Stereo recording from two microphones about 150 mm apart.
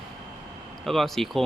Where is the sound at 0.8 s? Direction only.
Centre (ahead or behind).